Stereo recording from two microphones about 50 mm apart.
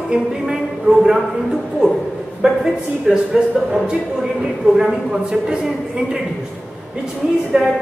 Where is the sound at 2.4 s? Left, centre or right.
Centre.